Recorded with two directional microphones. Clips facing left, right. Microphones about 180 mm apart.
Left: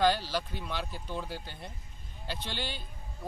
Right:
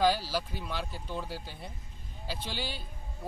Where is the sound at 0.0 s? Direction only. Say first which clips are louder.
Even; 5° right (ahead or behind).